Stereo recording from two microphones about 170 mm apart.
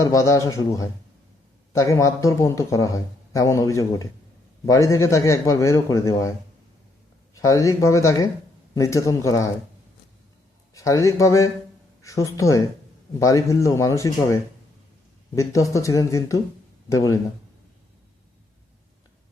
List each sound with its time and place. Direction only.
0.0 s a man's voice: 20° left (ahead or behind)
7.3 s a man's voice: 20° left (ahead or behind)
10.8 s a man's voice: 20° left (ahead or behind)
15.4 s a man's voice: 20° left (ahead or behind)